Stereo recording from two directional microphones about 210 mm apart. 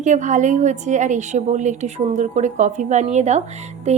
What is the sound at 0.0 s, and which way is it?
A woman's voice, 35° right (ahead or behind).